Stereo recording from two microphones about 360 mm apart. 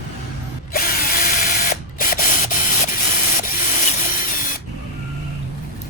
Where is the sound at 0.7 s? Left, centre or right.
Left.